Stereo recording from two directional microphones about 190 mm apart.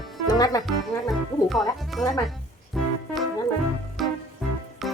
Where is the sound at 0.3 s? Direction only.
20° left (ahead or behind).